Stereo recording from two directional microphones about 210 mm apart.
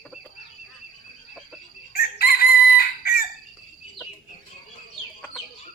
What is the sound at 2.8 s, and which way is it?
Chicken, 45° left (ahead or behind).